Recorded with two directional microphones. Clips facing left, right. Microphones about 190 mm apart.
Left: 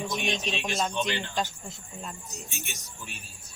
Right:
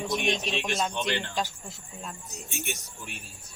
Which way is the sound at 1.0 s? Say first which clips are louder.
Right 1 dB; 60° right (ahead or behind).